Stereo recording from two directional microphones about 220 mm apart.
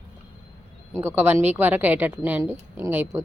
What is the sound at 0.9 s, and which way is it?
Speech, 10° right (ahead or behind).